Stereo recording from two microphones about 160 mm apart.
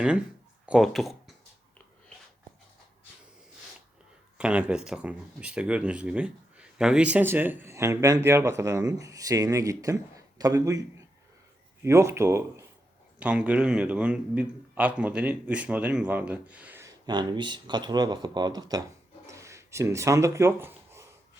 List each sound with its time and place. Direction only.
0.6 s speech: 5° right (ahead or behind)
4.4 s speech: 5° right (ahead or behind)
17.1 s speech: 30° right (ahead or behind)
19.3 s a sound: 20° right (ahead or behind)